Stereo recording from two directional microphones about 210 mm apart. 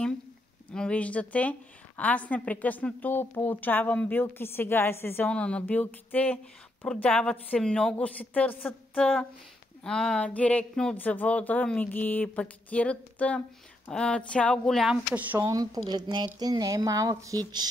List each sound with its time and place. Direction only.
0.7 s a woman's voice: 5° left (ahead or behind); by 17.6 s 20° right (ahead or behind)